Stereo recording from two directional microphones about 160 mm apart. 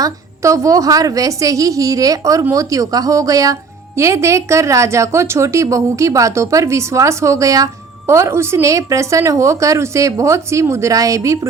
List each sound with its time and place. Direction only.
0.0 s a woman's voice: 20° right (ahead or behind)